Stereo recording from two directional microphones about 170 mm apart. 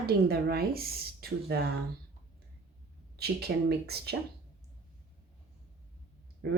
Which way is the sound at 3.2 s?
70° right (ahead or behind).